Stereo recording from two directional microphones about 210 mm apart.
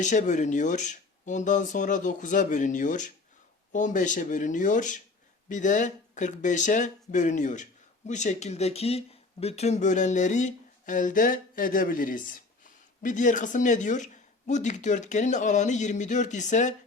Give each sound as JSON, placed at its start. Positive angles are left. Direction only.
{"t": 0.0, "sound": "speech", "side_deg": 35}